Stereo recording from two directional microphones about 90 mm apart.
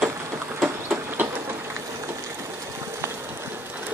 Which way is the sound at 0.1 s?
30° right (ahead or behind).